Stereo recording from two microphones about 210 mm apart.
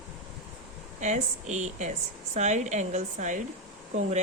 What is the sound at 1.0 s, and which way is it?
Speech, 35° right (ahead or behind).